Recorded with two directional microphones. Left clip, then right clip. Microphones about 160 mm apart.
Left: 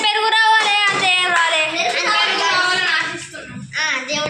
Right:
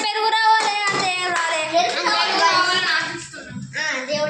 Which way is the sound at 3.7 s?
55° right (ahead or behind).